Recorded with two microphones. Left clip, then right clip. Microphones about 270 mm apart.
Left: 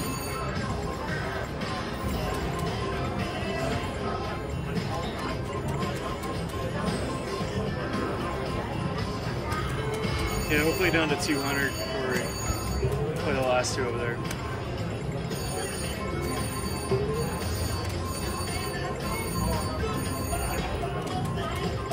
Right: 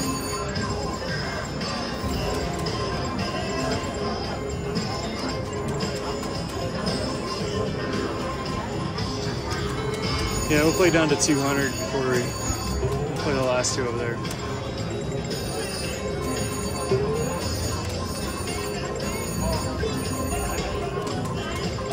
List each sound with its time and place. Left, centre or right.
10.5 s speech: centre
13.3 s music: centre